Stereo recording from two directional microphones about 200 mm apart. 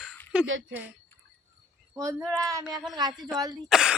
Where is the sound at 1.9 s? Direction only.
15° right (ahead or behind).